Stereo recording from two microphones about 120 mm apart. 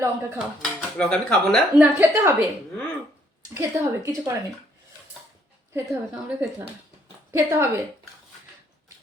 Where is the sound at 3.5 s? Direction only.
20° right (ahead or behind).